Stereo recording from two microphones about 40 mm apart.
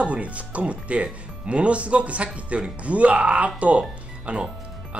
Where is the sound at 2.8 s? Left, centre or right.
Right.